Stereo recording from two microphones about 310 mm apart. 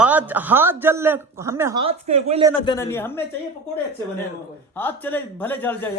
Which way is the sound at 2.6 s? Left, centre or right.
Centre.